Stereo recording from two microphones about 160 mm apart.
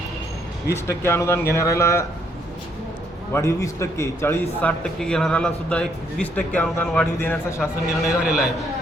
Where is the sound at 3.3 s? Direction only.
20° left (ahead or behind).